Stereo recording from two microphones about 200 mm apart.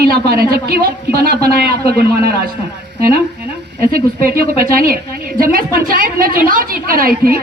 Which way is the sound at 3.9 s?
45° right (ahead or behind).